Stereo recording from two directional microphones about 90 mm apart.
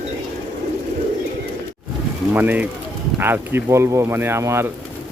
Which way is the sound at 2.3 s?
20° right (ahead or behind).